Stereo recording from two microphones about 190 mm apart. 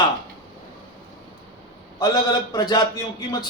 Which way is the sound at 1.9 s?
20° left (ahead or behind).